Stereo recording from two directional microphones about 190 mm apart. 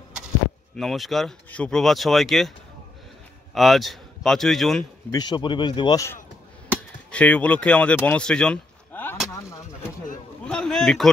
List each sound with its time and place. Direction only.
0.7 s speech: centre (ahead or behind)
3.5 s speech: centre (ahead or behind)
5.1 s a man's voice: 20° left (ahead or behind)
7.1 s speech: 5° left (ahead or behind)
9.3 s a sound: 15° left (ahead or behind)
10.4 s a sound: 5° left (ahead or behind)